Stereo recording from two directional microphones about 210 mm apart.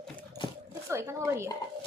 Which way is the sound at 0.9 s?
15° right (ahead or behind).